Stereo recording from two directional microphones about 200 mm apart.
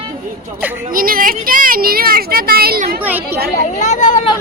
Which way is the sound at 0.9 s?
45° right (ahead or behind).